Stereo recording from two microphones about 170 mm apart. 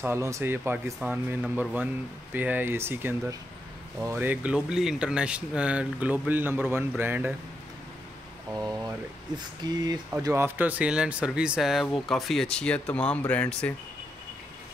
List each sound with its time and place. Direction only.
0.0 s speech: 15° right (ahead or behind)
9.6 s speech: 25° right (ahead or behind)
10.2 s speech: 15° right (ahead or behind); by 13.7 s 5° left (ahead or behind)